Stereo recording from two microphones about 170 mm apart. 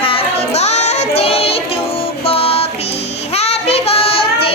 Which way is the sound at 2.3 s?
35° left (ahead or behind).